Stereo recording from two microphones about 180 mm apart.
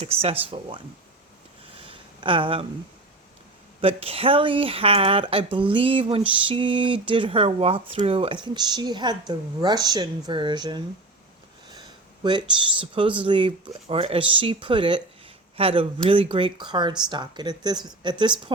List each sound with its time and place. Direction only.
0.0 s speech: 30° right (ahead or behind)
1.9 s a sound: 30° right (ahead or behind)
3.8 s speech: 30° right (ahead or behind)